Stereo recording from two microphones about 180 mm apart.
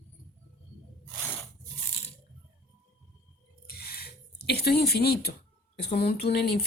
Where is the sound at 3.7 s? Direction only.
60° left (ahead or behind).